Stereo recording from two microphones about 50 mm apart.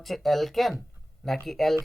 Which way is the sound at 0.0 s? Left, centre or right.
Centre.